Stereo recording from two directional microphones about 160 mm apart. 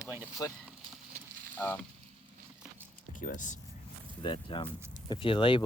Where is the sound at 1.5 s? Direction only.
10° left (ahead or behind).